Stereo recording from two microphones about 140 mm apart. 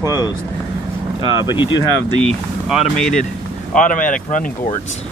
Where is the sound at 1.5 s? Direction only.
35° left (ahead or behind).